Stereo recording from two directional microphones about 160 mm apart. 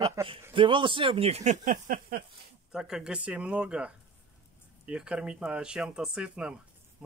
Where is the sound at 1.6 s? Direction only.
60° right (ahead or behind).